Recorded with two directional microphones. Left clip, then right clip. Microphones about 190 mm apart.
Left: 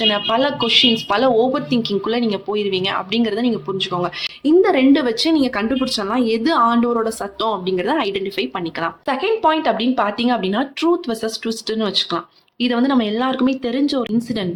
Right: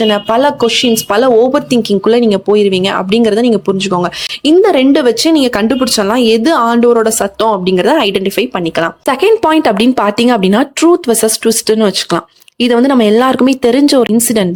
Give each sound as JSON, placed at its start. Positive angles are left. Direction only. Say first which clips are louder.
{"t": 0.0, "sound": "speech", "louder": "right 7 dB", "side_deg": -45}
{"t": 9.2, "sound": "speech", "louder": "right 8 dB", "side_deg": -55}